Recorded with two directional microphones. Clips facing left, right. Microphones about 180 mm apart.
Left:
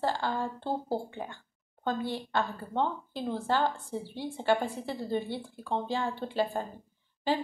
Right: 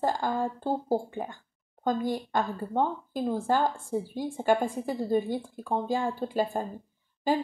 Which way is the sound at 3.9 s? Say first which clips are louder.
Right 5 dB; 40° right (ahead or behind).